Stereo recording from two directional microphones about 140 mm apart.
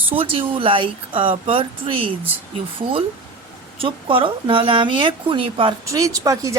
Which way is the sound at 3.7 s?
40° right (ahead or behind).